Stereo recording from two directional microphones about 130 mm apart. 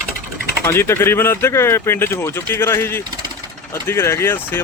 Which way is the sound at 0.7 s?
20° left (ahead or behind).